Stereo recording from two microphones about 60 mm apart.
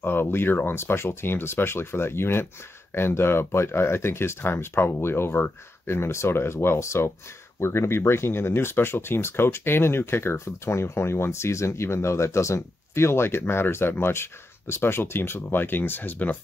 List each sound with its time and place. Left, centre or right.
0.0 s speech: left